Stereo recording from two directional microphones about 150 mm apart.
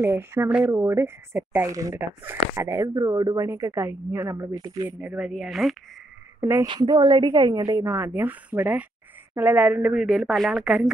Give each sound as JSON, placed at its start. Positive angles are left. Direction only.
{"t": 0.0, "sound": "speech", "side_deg": -15}
{"t": 6.4, "sound": "a woman's voice", "side_deg": -20}